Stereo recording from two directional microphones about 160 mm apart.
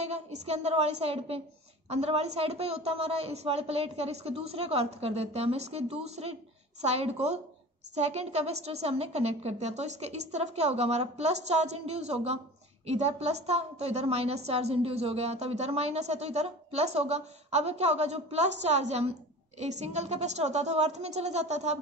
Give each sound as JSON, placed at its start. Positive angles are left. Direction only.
{"t": 0.0, "sound": "a woman's voice", "side_deg": -40}